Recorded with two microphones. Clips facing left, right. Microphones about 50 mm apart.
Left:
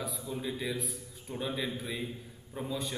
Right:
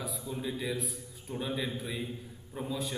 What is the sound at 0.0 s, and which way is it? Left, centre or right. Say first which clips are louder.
Speech: even; centre.